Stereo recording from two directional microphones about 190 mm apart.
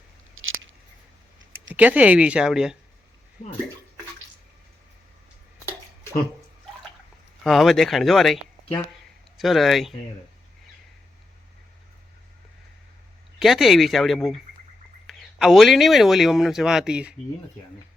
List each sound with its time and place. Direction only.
0.3 s a sound: 90° right
1.7 s speech: 10° right (ahead or behind)
7.4 s speech: centre (ahead or behind)
9.4 s speech: centre (ahead or behind)
13.4 s speech: centre (ahead or behind)